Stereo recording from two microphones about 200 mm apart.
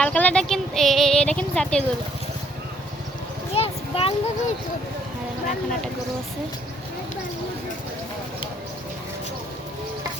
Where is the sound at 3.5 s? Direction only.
30° left (ahead or behind).